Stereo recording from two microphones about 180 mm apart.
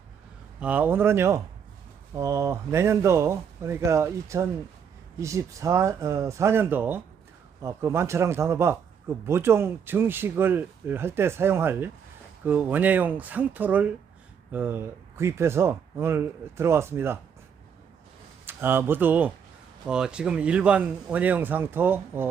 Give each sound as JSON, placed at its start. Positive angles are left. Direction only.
{"t": 0.6, "sound": "speech", "side_deg": -10}
{"t": 18.4, "sound": "speech", "side_deg": -10}